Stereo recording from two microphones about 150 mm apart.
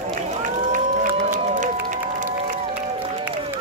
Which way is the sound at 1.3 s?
55° right (ahead or behind).